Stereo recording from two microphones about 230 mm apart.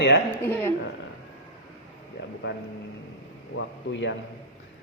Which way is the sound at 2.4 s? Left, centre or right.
Left.